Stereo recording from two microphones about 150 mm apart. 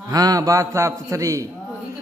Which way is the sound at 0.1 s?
25° right (ahead or behind).